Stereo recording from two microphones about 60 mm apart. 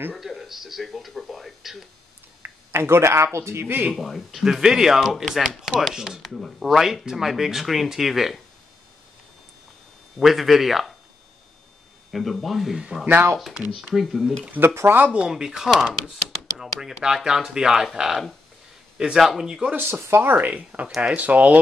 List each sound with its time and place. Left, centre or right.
0.1 s speech: centre
2.4 s a sound: right
3.3 s speech: right
3.9 s speech: centre
10.1 s speech: centre
12.1 s speech: centre
13.0 s speech: right
13.5 s speech: centre
14.5 s speech: right
15.1 s speech: centre
15.7 s speech: centre
19.7 s speech: right
20.9 s speech: centre